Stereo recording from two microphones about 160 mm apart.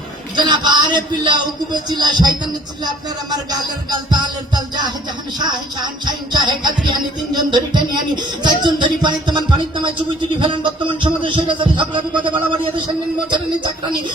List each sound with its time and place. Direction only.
0.3 s music: 25° right (ahead or behind)
10.4 s a man's voice: 30° right (ahead or behind)